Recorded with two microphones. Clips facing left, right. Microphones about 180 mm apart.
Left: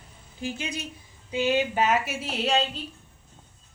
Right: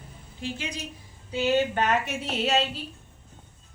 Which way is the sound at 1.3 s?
10° left (ahead or behind).